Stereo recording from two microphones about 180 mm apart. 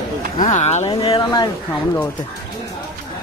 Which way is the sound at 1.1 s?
20° left (ahead or behind).